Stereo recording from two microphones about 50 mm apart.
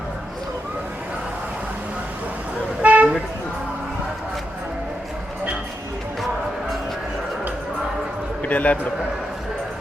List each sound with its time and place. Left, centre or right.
2.8 s vehicle: right
8.4 s a man's voice: left